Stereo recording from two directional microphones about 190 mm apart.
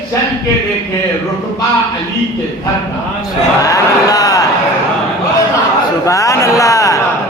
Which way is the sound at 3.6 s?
20° left (ahead or behind).